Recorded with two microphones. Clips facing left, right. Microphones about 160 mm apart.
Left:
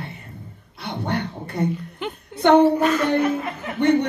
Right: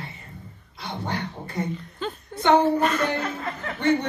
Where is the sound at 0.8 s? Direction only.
60° left (ahead or behind).